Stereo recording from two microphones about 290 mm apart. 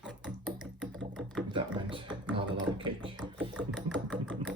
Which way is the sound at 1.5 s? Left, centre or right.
Centre.